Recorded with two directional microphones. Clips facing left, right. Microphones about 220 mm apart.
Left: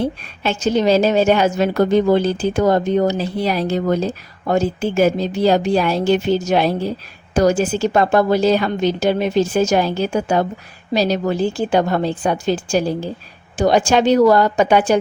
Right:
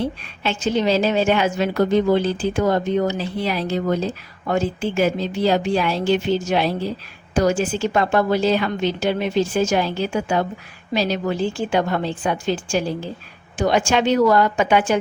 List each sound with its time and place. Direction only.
0.0 s a woman's voice: 45° left (ahead or behind)